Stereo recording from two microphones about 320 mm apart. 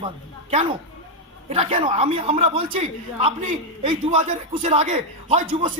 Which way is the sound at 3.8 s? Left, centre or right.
Centre.